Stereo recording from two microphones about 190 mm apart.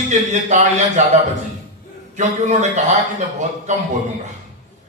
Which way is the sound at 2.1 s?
40° right (ahead or behind).